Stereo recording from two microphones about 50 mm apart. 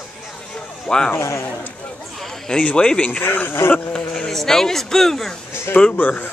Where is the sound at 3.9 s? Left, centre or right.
Centre.